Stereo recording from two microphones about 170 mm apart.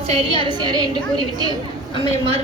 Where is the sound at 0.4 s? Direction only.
25° right (ahead or behind).